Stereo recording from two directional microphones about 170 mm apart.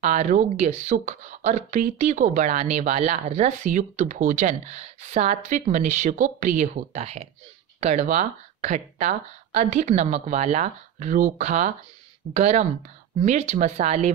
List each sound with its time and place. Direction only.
0.0 s speech: 45° right (ahead or behind)